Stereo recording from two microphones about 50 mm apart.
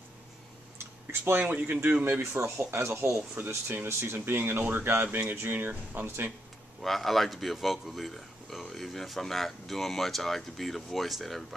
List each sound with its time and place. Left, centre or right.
1.3 s speech: right
3.6 s speech: right
6.8 s a man's voice: centre